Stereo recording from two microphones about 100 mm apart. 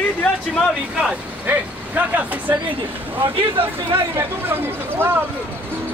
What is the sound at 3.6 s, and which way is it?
Speech, 65° right (ahead or behind).